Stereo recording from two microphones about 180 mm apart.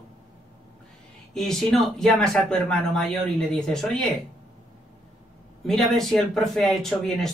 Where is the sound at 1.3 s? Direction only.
5° left (ahead or behind).